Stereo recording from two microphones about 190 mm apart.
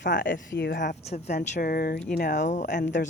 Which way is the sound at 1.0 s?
35° left (ahead or behind).